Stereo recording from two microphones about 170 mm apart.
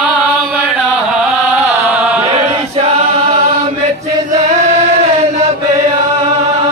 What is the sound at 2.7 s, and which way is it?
Choir, 35° right (ahead or behind).